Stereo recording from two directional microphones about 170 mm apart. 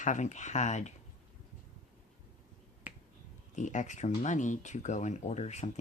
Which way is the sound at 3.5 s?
45° left (ahead or behind).